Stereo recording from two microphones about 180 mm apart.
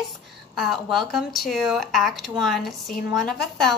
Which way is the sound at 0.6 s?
Centre (ahead or behind).